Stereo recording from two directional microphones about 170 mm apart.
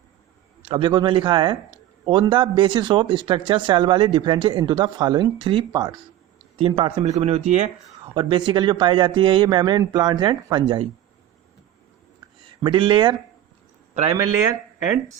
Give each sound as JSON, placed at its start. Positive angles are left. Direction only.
{"t": 0.6, "sound": "speech", "side_deg": -30}
{"t": 8.0, "sound": "speech", "side_deg": -30}
{"t": 12.6, "sound": "speech", "side_deg": -30}
{"t": 13.9, "sound": "a man's voice", "side_deg": -45}